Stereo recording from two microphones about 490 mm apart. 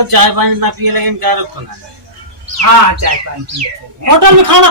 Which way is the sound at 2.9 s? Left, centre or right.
Right.